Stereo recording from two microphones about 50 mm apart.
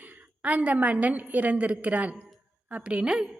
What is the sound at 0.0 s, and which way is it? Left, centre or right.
A woman's voice, right.